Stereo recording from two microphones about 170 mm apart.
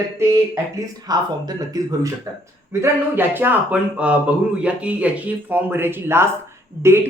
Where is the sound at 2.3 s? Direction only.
15° right (ahead or behind).